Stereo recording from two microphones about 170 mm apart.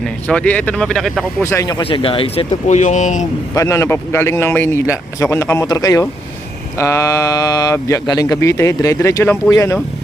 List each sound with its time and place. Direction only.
0.0 s speech: 5° left (ahead or behind)
1.4 s speech: 15° left (ahead or behind); by 3.2 s 45° left (ahead or behind)
3.5 s speech: 15° left (ahead or behind)